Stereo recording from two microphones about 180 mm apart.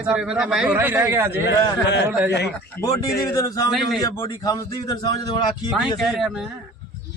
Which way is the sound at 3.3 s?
20° left (ahead or behind).